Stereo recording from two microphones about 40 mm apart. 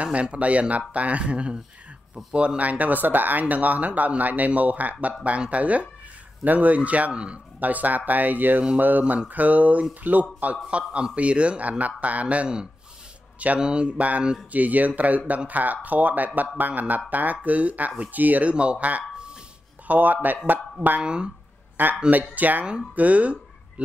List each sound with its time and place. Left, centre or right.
0.0 s speech: right
10.7 s a man's voice: right
13.6 s speech: right
18.5 s a man's voice: right
19.9 s speech: right
21.0 s a man's voice: right
21.8 s speech: right